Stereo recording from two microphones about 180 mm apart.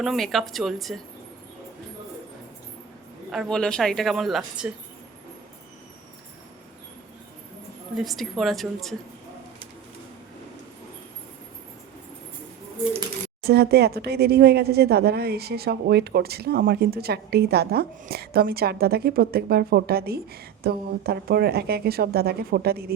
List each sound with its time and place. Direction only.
0.0 s a woman's voice: centre (ahead or behind)
3.3 s a woman's voice: 5° left (ahead or behind)
7.9 s a woman's voice: centre (ahead or behind)
13.4 s speech: 60° right (ahead or behind)